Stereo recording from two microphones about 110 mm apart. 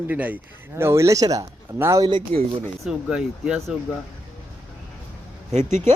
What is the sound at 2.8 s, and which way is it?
Speech, 5° right (ahead or behind).